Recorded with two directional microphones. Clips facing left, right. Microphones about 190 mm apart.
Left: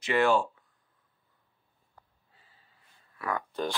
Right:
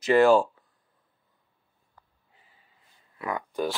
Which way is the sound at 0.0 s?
40° right (ahead or behind).